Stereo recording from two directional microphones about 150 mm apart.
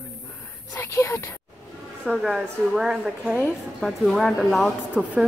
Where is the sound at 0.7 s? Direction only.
20° left (ahead or behind).